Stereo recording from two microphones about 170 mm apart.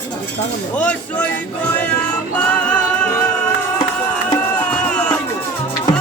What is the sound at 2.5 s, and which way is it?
Music, 10° left (ahead or behind).